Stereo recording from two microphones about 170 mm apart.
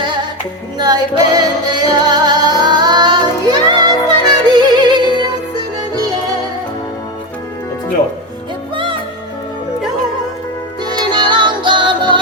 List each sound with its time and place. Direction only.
0.0 s music: 25° right (ahead or behind)
8.7 s music: 30° right (ahead or behind)
10.8 s music: 25° right (ahead or behind)